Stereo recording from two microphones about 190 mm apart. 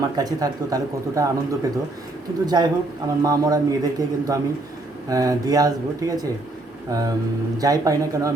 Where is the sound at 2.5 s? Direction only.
20° right (ahead or behind).